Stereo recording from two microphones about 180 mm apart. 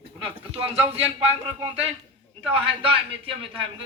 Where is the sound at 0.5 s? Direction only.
35° right (ahead or behind).